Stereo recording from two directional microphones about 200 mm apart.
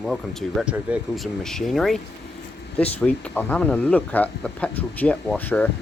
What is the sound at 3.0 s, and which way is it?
Speech, 5° left (ahead or behind).